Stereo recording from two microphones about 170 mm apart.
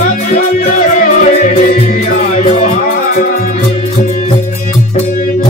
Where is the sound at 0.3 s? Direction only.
50° left (ahead or behind).